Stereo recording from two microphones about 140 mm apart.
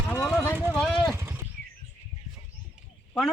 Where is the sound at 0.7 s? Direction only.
5° left (ahead or behind).